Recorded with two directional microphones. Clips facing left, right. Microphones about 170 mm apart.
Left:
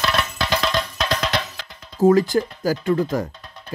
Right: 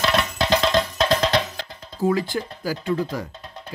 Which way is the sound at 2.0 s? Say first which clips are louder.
Left 7 dB; 45° left (ahead or behind).